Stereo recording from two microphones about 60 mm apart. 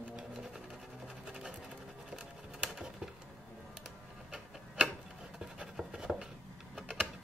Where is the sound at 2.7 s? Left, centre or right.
Centre.